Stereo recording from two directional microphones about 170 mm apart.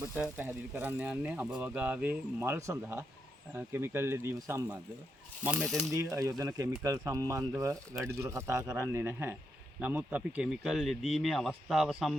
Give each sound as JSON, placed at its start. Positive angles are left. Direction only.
{"t": 0.2, "sound": "speech", "side_deg": -10}
{"t": 5.4, "sound": "speech", "side_deg": -5}
{"t": 5.9, "sound": "speech", "side_deg": -20}